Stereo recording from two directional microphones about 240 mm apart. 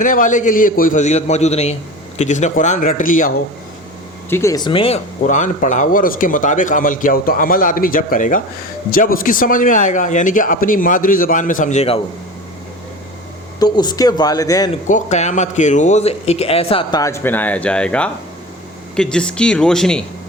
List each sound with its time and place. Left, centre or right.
0.0 s speech: left
4.3 s speech: centre; by 11.9 s left
13.6 s speech: centre
14.8 s speech: left; by 20.0 s centre